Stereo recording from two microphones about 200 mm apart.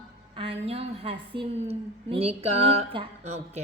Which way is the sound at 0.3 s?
30° right (ahead or behind).